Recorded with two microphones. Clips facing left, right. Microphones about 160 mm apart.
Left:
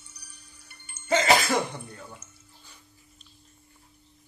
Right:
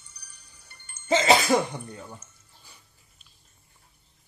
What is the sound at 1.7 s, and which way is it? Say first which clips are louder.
Speech: right 3 dB; 15° right (ahead or behind).